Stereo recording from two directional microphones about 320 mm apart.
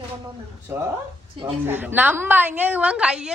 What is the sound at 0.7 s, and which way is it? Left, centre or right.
A woman's voice, centre.